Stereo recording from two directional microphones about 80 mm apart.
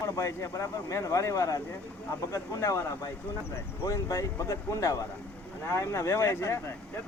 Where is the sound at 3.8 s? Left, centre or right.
Left.